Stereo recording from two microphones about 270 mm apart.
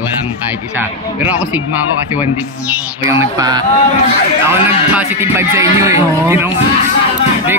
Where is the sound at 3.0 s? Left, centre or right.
Centre.